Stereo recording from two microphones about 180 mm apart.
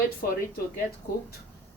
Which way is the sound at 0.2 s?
55° left (ahead or behind).